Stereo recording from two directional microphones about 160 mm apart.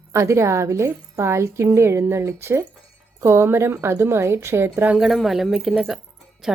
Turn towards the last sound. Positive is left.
turn(degrees=0)  # may be behind; listen again after turning